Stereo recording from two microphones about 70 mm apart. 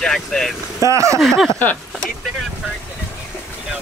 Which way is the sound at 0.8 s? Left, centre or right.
Right.